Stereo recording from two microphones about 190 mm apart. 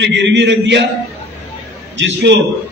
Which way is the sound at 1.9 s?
70° right (ahead or behind).